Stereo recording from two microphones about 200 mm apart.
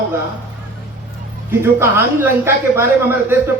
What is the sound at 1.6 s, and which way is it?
A man's voice, 10° right (ahead or behind).